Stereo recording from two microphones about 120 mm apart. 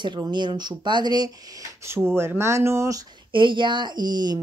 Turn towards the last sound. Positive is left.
turn(degrees=-35)  # may be behind; listen again after turning